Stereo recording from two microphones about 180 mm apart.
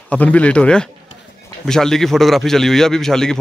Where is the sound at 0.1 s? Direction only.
10° left (ahead or behind).